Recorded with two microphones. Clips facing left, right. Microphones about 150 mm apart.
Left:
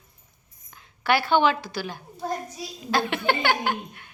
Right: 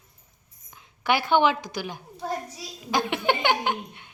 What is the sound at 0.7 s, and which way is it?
A woman's voice, 15° right (ahead or behind).